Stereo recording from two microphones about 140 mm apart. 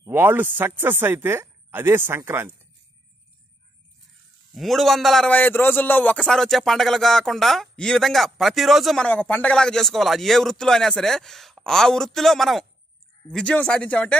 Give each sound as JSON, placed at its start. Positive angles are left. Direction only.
{"t": 0.1, "sound": "speech", "side_deg": -15}
{"t": 4.6, "sound": "a man's voice", "side_deg": 0}